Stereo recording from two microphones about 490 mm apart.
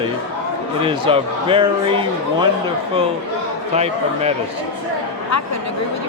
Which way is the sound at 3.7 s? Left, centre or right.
Centre.